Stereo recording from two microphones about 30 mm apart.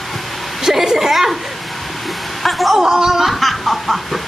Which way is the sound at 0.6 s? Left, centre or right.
Centre.